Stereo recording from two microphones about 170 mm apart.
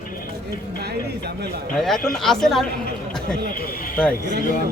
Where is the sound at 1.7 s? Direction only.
5° left (ahead or behind).